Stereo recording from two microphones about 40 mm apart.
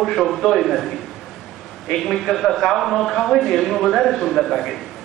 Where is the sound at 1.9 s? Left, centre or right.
Centre.